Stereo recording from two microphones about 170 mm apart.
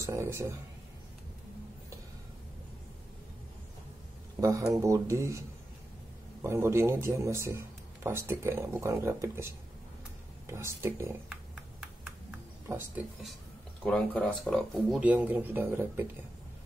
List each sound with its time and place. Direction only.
0.0 s a man's voice: 15° right (ahead or behind)
4.4 s a man's voice: 20° right (ahead or behind)
6.4 s a man's voice: 15° right (ahead or behind)
12.6 s speech: 15° right (ahead or behind)
13.8 s speech: 5° left (ahead or behind)
15.0 s a man's voice: 10° right (ahead or behind)